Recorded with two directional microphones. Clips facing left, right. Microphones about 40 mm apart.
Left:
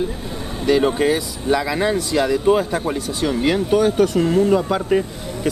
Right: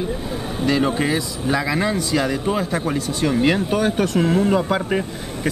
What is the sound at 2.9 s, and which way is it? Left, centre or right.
Speech, centre.